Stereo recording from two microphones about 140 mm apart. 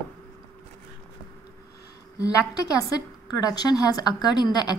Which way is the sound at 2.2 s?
25° left (ahead or behind).